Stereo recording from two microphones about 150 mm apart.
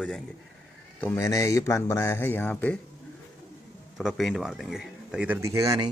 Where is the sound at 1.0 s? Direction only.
20° left (ahead or behind).